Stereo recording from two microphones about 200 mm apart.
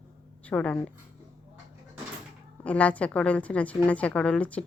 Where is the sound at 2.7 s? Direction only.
5° left (ahead or behind).